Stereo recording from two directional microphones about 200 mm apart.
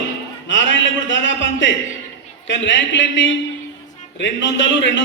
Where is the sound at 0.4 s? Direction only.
65° left (ahead or behind).